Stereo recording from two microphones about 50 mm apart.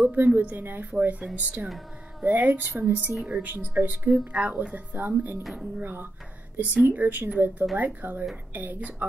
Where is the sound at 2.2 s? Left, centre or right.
Right.